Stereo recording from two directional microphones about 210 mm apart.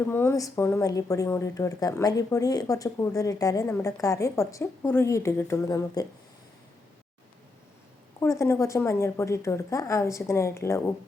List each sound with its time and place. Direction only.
0.1 s speech: 10° left (ahead or behind)
8.2 s speech: 15° left (ahead or behind)